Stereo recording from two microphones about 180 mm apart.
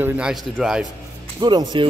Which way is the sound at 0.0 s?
5° right (ahead or behind).